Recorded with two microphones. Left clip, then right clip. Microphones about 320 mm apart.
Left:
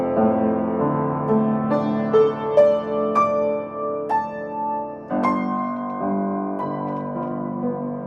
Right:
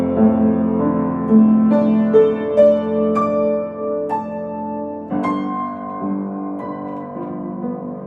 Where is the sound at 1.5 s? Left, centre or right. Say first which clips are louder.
Right 5 dB; left.